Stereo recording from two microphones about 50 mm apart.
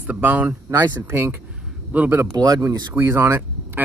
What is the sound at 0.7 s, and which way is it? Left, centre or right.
Speech, right.